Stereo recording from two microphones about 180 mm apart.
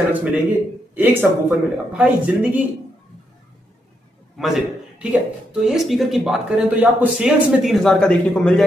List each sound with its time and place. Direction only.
0.1 s speech: 10° right (ahead or behind)
4.4 s a man's voice: centre (ahead or behind)